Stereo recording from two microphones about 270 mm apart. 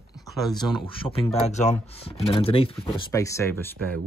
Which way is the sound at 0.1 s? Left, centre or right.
Centre.